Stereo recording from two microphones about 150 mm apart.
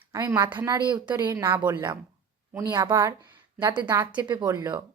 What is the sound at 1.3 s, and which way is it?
A woman's voice, 15° right (ahead or behind).